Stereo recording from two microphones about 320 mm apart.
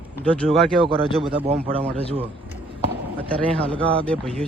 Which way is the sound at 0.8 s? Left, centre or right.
Centre.